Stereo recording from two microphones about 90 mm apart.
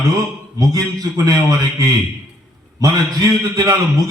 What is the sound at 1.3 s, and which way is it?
Speech, 45° right (ahead or behind).